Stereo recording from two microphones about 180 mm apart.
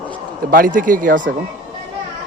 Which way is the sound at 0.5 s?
50° right (ahead or behind).